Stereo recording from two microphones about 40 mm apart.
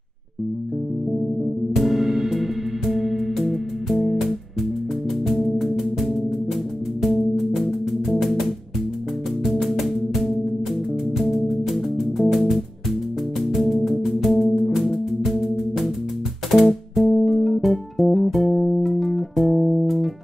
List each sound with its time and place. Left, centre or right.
1.8 s music: centre
7.0 s music: centre
11.3 s music: centre
13.6 s music: centre
16.4 s music: centre